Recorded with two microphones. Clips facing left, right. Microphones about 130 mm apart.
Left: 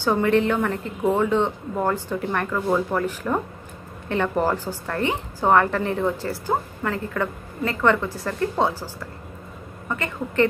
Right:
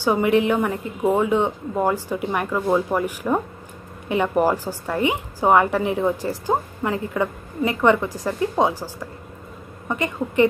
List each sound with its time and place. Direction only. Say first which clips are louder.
0.0 s a woman's voice: right 1 dB; 10° right (ahead or behind)